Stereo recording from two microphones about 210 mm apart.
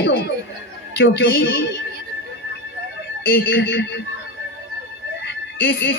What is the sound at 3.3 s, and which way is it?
Speech, 45° left (ahead or behind).